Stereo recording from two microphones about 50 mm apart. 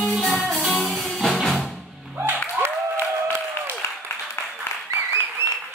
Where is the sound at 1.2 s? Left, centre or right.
Centre.